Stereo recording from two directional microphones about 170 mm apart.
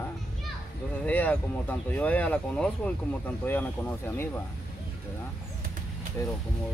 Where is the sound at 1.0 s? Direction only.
10° left (ahead or behind).